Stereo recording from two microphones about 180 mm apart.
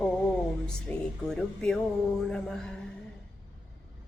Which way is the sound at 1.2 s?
5° left (ahead or behind).